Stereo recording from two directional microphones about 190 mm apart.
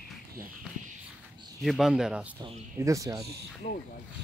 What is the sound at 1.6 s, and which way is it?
Speech, centre (ahead or behind).